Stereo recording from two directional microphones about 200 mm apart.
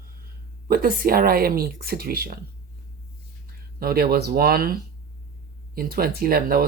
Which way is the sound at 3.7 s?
50° right (ahead or behind).